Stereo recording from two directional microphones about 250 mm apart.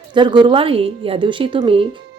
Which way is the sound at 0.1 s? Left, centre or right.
Centre.